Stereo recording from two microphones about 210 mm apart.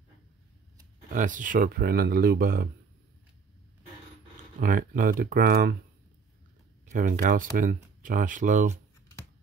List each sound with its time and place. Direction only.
1.0 s speech: 40° right (ahead or behind)
4.6 s speech: 40° right (ahead or behind)
6.9 s speech: 40° right (ahead or behind)